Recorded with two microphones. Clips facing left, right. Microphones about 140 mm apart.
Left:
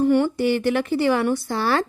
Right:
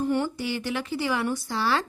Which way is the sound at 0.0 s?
70° left (ahead or behind).